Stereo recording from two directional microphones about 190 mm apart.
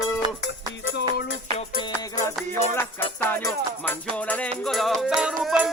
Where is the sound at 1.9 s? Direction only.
15° left (ahead or behind).